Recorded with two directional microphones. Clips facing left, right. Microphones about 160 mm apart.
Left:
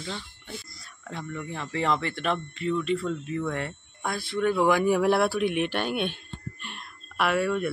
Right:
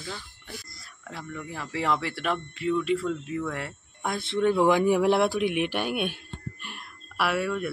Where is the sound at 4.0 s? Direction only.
20° right (ahead or behind).